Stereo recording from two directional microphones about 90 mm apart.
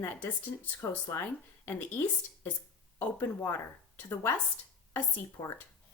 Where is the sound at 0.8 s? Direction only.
30° left (ahead or behind).